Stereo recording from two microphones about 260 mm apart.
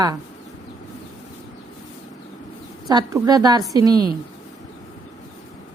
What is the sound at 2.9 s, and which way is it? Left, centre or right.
Speech, centre.